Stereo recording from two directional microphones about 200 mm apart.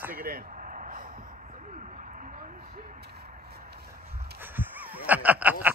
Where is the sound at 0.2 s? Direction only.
45° right (ahead or behind).